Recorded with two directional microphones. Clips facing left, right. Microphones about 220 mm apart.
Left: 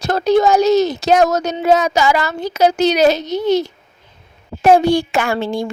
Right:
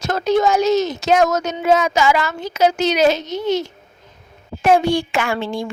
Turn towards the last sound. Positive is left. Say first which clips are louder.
# left 3 dB
turn(degrees=40)  # may be behind; listen again after turning